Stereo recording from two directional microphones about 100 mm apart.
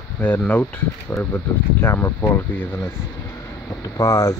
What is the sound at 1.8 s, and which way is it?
Speech, 25° left (ahead or behind).